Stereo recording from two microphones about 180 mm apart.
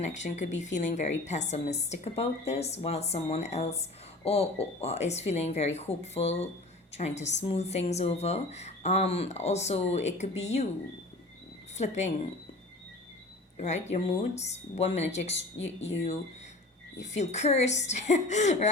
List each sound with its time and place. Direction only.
0.0 s a woman's voice: 40° left (ahead or behind)
11.8 s a woman's voice: 40° left (ahead or behind)
13.6 s a woman's voice: 40° left (ahead or behind)
15.8 s speech: 90° left
17.0 s a woman's voice: 40° left (ahead or behind)